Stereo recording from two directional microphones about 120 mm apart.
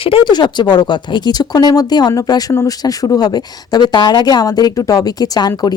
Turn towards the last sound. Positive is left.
turn(degrees=35)  # may be behind; listen again after turning